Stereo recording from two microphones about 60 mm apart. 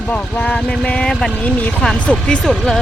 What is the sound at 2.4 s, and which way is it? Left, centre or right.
Speech, centre.